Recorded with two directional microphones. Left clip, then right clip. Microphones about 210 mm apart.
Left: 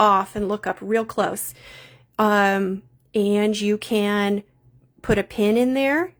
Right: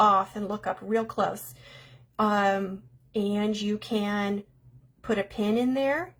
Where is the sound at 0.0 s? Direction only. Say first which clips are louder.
Left 4 dB; 50° left (ahead or behind).